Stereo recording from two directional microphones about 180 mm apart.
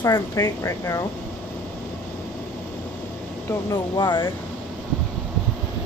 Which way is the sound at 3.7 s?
25° left (ahead or behind).